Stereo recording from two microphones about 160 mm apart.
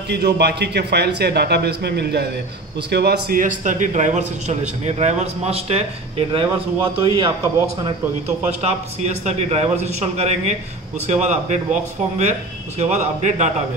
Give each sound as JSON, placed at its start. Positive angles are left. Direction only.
{"t": 0.1, "sound": "a man's voice", "side_deg": -90}
{"t": 8.6, "sound": "a man's voice", "side_deg": -45}